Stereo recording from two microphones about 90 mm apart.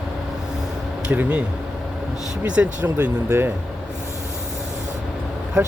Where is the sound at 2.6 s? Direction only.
20° right (ahead or behind).